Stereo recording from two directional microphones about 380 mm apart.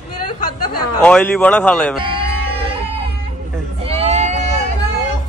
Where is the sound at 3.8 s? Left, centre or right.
Centre.